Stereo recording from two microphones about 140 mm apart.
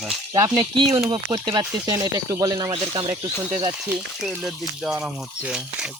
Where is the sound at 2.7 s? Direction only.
40° right (ahead or behind).